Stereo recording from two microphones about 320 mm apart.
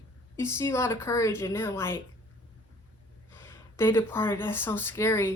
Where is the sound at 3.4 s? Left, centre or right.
Centre.